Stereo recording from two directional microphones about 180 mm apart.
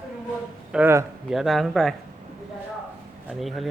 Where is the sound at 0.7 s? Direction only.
10° right (ahead or behind).